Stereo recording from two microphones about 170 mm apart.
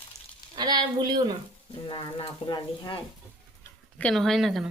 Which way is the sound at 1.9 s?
30° left (ahead or behind).